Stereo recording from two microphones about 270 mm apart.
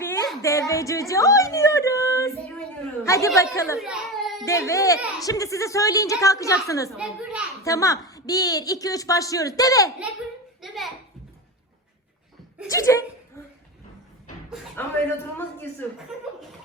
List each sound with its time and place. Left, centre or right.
0.0 s a woman's voice: centre
3.8 s baby cry: centre
4.4 s a woman's voice: centre
6.9 s a child's voice: centre
7.6 s a woman's voice: centre
10.6 s a sound: centre
12.6 s a woman's voice: centre
14.8 s a woman's voice: centre